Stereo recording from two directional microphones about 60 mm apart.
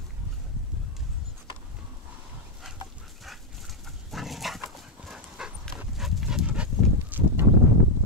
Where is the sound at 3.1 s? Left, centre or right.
Centre.